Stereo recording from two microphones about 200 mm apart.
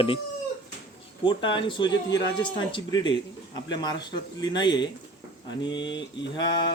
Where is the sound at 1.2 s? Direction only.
25° left (ahead or behind).